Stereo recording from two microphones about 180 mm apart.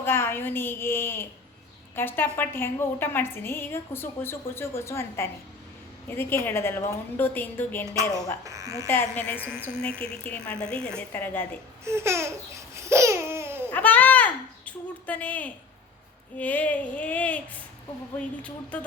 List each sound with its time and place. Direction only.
0.0 s a woman's voice: 15° left (ahead or behind)
8.4 s a woman's voice: 15° right (ahead or behind)
8.9 s a woman's voice: 10° left (ahead or behind)
11.9 s laughter: 15° right (ahead or behind)
13.7 s a sound: 10° left (ahead or behind)
16.4 s a woman's voice: 10° left (ahead or behind)